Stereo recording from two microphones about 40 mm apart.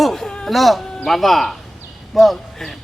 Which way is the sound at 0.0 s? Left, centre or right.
Centre.